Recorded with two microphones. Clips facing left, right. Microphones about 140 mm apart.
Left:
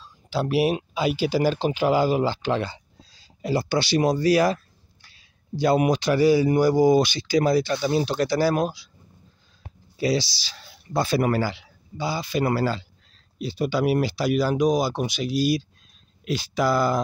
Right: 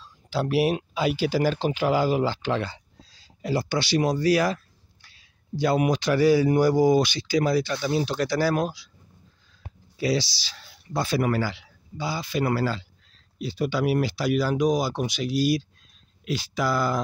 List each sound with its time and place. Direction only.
0.3 s speech: 20° left (ahead or behind)
3.6 s speech: 40° left (ahead or behind)
5.6 s speech: 30° left (ahead or behind)
6.0 s speech: 20° left (ahead or behind)
6.8 s speech: 25° left (ahead or behind)
9.9 s speech: 30° left (ahead or behind); by 15.6 s 10° left (ahead or behind)
16.3 s speech: 30° left (ahead or behind)